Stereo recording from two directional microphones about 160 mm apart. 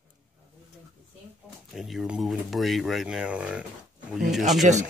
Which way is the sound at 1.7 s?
Centre (ahead or behind).